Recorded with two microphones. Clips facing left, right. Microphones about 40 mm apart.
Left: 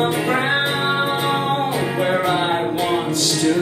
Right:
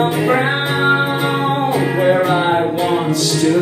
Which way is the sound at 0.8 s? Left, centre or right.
Right.